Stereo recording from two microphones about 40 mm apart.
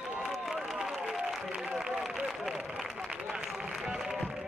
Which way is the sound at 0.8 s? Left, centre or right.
Centre.